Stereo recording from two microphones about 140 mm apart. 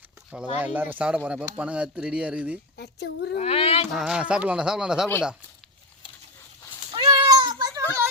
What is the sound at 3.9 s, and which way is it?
Speech, 5° right (ahead or behind).